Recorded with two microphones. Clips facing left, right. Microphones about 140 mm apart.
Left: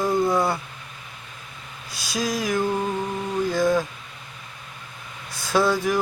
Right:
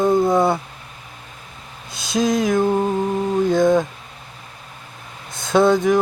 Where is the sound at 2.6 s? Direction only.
20° right (ahead or behind).